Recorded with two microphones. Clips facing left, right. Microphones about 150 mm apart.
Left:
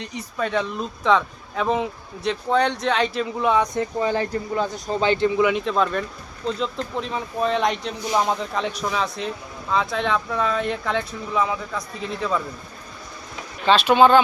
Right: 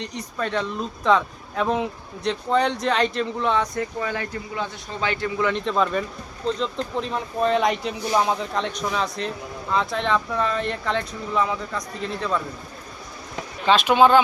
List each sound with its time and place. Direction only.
0.0 s speech: 5° left (ahead or behind)
3.8 s speech: 30° left (ahead or behind)
5.4 s speech: 10° left (ahead or behind)
13.7 s speech: 10° right (ahead or behind)